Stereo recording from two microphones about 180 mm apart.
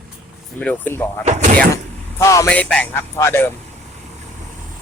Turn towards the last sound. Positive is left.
turn(degrees=10)  # may be behind; listen again after turning